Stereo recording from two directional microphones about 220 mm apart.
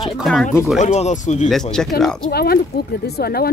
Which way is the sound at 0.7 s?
30° left (ahead or behind).